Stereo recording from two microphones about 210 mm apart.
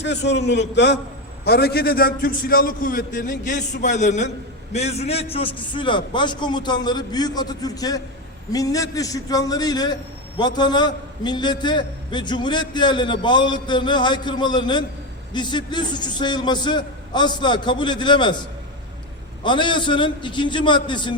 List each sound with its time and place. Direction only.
0.0 s a man's voice: 55° left (ahead or behind); by 18.3 s 20° left (ahead or behind)
19.4 s a man's voice: 20° left (ahead or behind)